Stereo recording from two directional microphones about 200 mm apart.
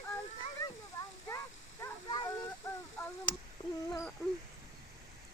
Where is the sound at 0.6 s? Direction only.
15° left (ahead or behind).